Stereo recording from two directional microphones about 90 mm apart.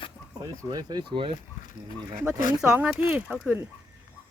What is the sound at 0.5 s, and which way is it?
Speech, 45° right (ahead or behind).